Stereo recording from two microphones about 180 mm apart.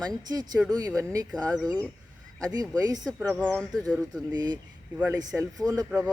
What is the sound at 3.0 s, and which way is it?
Speech, centre (ahead or behind).